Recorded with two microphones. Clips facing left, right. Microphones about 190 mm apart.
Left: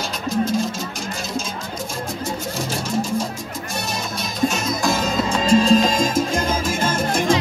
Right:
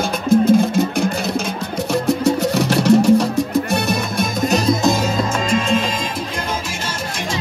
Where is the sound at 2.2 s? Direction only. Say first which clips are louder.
Right 10 dB; 70° right (ahead or behind).